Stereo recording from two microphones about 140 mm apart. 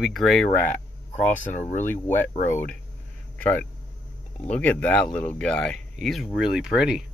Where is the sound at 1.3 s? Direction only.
65° left (ahead or behind).